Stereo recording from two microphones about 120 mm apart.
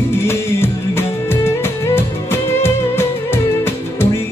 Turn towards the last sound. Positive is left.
turn(degrees=20)  # may be behind; listen again after turning